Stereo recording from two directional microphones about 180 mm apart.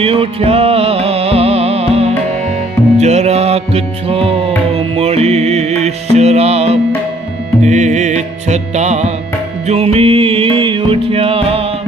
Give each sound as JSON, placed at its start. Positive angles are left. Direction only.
{"t": 0.0, "sound": "music", "side_deg": -30}